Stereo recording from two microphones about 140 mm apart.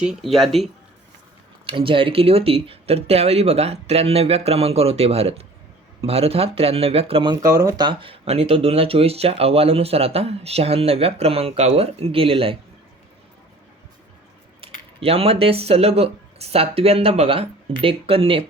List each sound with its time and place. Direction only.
0.0 s speech: 5° right (ahead or behind)
1.6 s speech: 40° right (ahead or behind)
7.4 s speech: 25° right (ahead or behind); by 12.5 s 40° right (ahead or behind)
14.6 s keys jangling: 40° right (ahead or behind)
15.0 s speech: 45° right (ahead or behind)